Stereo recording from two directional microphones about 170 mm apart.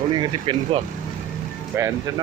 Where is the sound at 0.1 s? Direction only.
30° right (ahead or behind).